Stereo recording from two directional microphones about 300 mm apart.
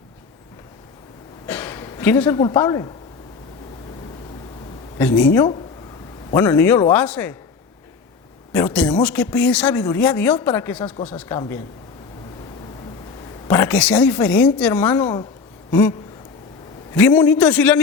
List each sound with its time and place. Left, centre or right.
1.5 s speech: centre
4.9 s speech: centre
8.5 s speech: centre
13.5 s speech: centre